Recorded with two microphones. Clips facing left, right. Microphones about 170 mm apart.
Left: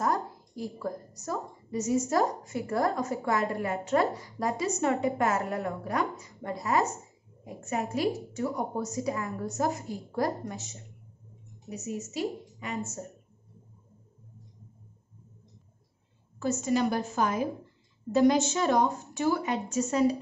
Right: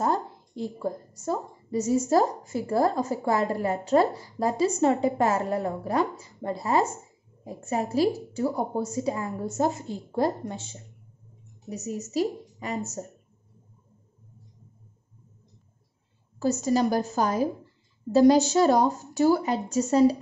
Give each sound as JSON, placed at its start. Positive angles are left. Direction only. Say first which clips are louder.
{"t": 0.0, "sound": "a woman's voice", "louder": "right 3 dB", "side_deg": -25}
{"t": 16.3, "sound": "a woman's voice", "louder": "right 4 dB", "side_deg": -35}